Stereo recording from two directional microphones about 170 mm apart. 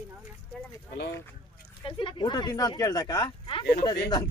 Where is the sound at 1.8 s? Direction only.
30° left (ahead or behind).